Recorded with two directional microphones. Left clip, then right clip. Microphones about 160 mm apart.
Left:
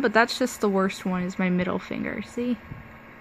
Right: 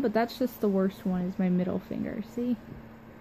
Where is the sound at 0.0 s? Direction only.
20° left (ahead or behind).